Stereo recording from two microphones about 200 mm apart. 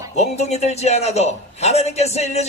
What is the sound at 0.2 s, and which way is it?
A man's voice, 35° left (ahead or behind).